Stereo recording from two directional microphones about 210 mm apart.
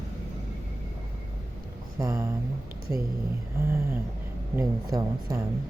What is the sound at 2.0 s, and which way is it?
Speech, 15° right (ahead or behind).